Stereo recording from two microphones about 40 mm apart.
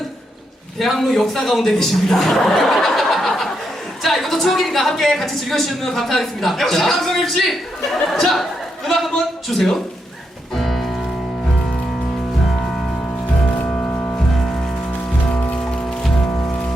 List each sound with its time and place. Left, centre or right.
0.8 s a woman's voice: centre
4.0 s a sound: centre
4.4 s a woman's voice: centre
10.5 s music: centre
13.7 s music: left
15.3 s music: left
15.5 s music: left